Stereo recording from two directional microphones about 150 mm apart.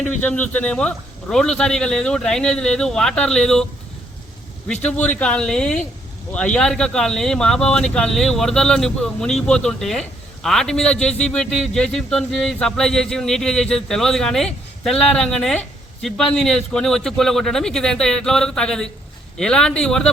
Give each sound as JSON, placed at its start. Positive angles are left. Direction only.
{"t": 0.0, "sound": "speech", "side_deg": 10}
{"t": 4.7, "sound": "speech", "side_deg": 10}